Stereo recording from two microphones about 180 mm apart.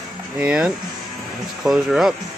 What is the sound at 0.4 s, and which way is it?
Speech, 5° right (ahead or behind).